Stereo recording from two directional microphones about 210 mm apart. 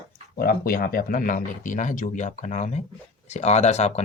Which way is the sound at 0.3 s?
45° left (ahead or behind).